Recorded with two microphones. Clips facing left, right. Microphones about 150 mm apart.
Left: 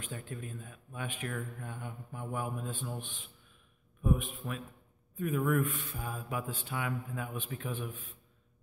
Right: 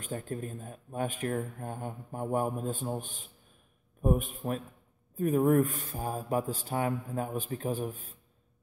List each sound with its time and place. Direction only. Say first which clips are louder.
0.0 s speech: right 6 dB; 40° right (ahead or behind)